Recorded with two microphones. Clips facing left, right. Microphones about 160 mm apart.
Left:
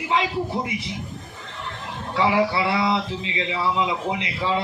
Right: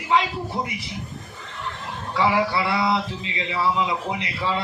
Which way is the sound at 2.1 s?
25° left (ahead or behind).